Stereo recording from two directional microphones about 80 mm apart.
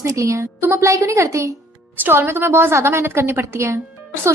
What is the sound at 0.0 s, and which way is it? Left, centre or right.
A woman's voice, right.